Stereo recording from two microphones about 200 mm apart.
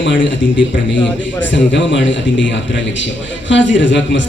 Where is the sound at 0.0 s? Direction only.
65° left (ahead or behind).